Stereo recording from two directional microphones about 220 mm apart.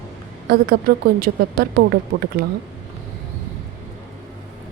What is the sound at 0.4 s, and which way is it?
A woman's voice, 45° right (ahead or behind).